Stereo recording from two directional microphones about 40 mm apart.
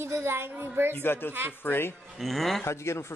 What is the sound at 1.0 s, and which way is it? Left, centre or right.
Speech, left.